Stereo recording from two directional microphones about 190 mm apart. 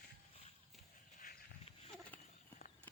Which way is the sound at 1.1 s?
45° left (ahead or behind).